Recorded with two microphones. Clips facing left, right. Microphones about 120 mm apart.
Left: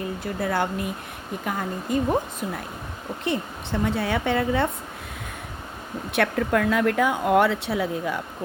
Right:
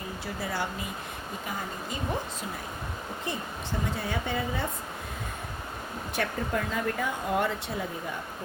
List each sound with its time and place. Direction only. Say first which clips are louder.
0.3 s speech: left 8 dB; 55° left (ahead or behind)
3.2 s a woman's voice: left 8 dB; 70° left (ahead or behind)
6.1 s speech: left 8 dB; 75° left (ahead or behind)